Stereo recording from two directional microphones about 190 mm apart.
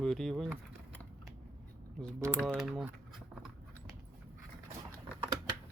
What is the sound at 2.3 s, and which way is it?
Speech, 5° left (ahead or behind).